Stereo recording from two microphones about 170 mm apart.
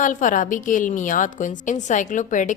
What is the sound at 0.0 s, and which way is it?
A woman's voice, 50° left (ahead or behind).